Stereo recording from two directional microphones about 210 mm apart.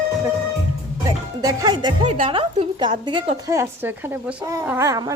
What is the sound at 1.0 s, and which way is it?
A woman's voice, 20° right (ahead or behind).